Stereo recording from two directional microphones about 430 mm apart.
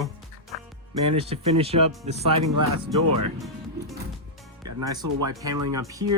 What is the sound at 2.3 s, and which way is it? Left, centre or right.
Speech, right.